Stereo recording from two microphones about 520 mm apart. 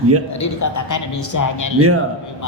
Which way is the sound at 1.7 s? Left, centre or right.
Right.